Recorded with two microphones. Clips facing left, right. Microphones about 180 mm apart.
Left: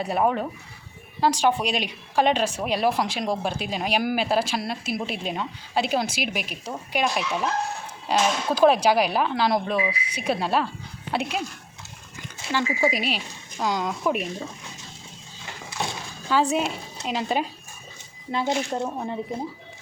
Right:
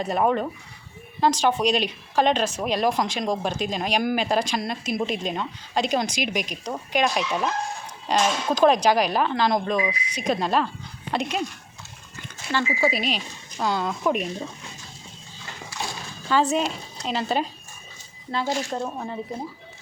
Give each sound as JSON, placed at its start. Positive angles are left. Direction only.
{"t": 0.0, "sound": "speech", "side_deg": 5}
{"t": 12.1, "sound": "dog", "side_deg": 10}
{"t": 12.8, "sound": "speech", "side_deg": 10}
{"t": 16.3, "sound": "speech", "side_deg": 10}